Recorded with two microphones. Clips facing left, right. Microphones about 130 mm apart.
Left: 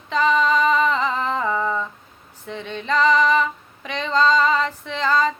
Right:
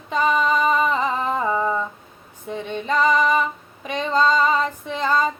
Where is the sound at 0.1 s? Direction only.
10° right (ahead or behind).